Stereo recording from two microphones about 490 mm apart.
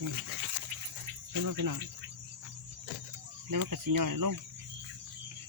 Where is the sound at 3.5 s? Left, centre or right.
Right.